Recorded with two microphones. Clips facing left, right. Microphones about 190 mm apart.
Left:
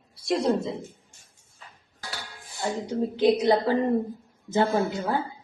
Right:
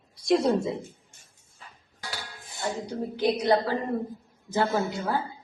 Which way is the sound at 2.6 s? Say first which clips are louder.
Left 4 dB; 20° left (ahead or behind).